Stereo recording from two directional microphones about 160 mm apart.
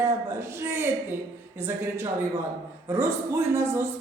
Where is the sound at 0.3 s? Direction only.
15° right (ahead or behind).